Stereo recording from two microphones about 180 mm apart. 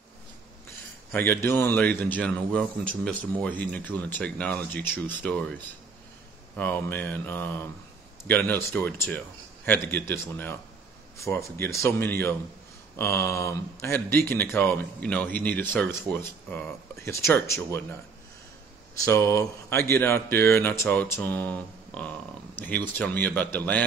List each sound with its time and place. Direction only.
1.1 s speech: 10° left (ahead or behind)
18.9 s speech: 15° left (ahead or behind)